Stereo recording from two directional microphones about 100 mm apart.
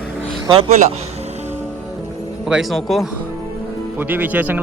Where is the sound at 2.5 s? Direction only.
Centre (ahead or behind).